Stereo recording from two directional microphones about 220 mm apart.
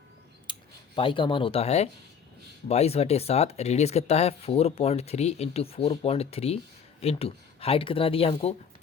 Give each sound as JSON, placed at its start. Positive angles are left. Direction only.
{"t": 0.5, "sound": "clicking", "side_deg": 20}
{"t": 0.9, "sound": "speech", "side_deg": 25}